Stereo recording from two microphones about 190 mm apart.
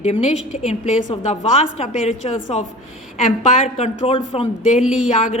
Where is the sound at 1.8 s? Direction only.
35° left (ahead or behind).